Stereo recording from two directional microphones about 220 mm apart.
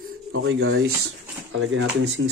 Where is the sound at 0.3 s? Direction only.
65° right (ahead or behind).